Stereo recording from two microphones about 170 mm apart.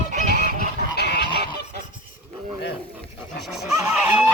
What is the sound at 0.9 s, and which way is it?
Goose, 75° left (ahead or behind).